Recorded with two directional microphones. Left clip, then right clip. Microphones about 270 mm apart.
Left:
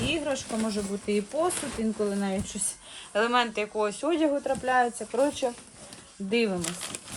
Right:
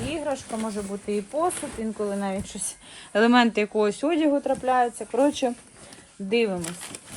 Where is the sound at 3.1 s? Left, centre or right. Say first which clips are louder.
Right 5 dB; right.